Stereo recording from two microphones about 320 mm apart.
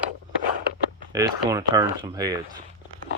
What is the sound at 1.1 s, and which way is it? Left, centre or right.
Speech, centre.